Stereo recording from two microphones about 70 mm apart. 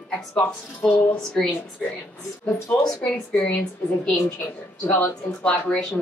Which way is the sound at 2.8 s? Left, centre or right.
Centre.